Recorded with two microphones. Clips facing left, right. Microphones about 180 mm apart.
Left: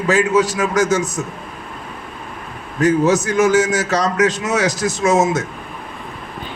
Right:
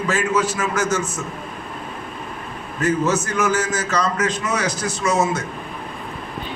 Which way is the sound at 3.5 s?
90° left.